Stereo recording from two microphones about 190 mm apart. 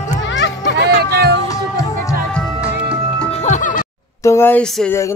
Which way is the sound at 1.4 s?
15° left (ahead or behind).